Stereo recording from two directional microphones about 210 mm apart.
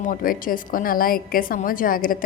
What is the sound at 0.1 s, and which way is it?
A woman's voice, 40° left (ahead or behind).